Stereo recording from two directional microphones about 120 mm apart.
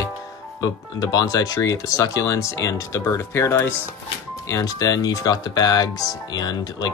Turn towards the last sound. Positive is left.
turn(degrees=35)  # may be behind; listen again after turning